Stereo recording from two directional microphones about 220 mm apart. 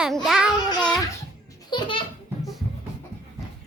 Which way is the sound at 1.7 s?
20° left (ahead or behind).